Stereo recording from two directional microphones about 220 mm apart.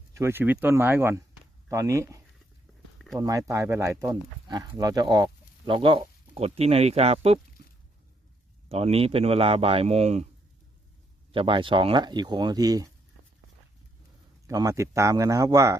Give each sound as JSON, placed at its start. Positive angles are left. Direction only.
{"t": 0.1, "sound": "speech", "side_deg": -10}
{"t": 8.7, "sound": "speech", "side_deg": -25}
{"t": 11.3, "sound": "speech", "side_deg": -25}
{"t": 14.4, "sound": "speech", "side_deg": -15}